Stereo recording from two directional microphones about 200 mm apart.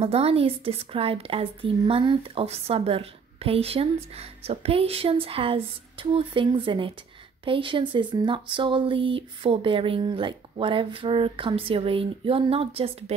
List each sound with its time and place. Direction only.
0.0 s a woman's voice: 30° right (ahead or behind)